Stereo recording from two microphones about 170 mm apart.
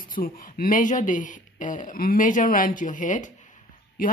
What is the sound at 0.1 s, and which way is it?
Speech, 55° left (ahead or behind).